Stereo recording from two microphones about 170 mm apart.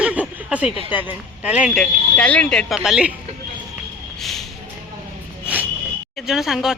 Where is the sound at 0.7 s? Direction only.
35° left (ahead or behind).